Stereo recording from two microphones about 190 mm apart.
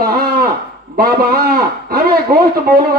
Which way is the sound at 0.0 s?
50° right (ahead or behind).